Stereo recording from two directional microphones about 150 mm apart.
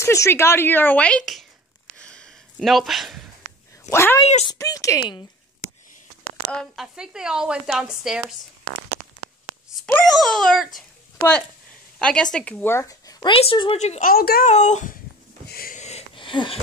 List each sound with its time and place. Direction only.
0.0 s a woman's voice: 20° left (ahead or behind)
2.0 s a sound: 5° left (ahead or behind)
3.9 s a woman's voice: 15° left (ahead or behind)
6.5 s speech: centre (ahead or behind)
9.8 s speech: 5° left (ahead or behind)
12.0 s speech: 5° left (ahead or behind); by 13.3 s 25° left (ahead or behind)
13.3 s speech: 35° left (ahead or behind)
14.0 s a woman's voice: 80° left
14.4 s a child's voice: 50° left (ahead or behind)
15.4 s a sound: 85° left
16.2 s a sound: 35° left (ahead or behind)